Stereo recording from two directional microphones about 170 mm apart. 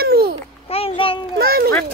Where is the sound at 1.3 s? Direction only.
60° right (ahead or behind).